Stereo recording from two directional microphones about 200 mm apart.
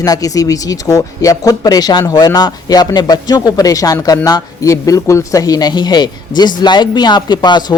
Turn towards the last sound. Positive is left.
turn(degrees=20)  # may be behind; listen again after turning